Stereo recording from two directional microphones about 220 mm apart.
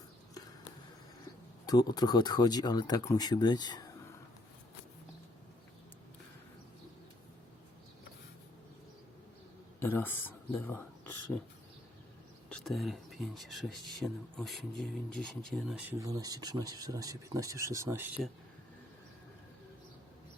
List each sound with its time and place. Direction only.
1.6 s speech: 15° left (ahead or behind)
9.8 s speech: 10° left (ahead or behind)
12.5 s speech: 5° left (ahead or behind)
16.0 s speech: 15° right (ahead or behind)